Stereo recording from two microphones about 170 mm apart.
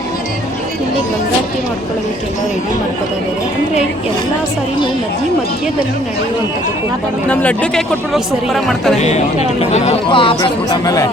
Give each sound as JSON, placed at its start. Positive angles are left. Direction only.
{"t": 7.3, "sound": "speech", "side_deg": 5}
{"t": 9.0, "sound": "speech", "side_deg": 40}